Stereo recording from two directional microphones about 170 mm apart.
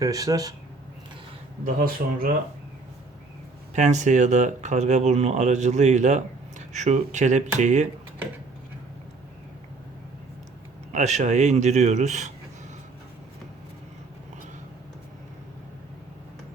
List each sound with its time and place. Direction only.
0.0 s speech: 20° right (ahead or behind)
1.6 s speech: 55° right (ahead or behind)
3.8 s speech: 45° right (ahead or behind)
10.9 s speech: 45° right (ahead or behind)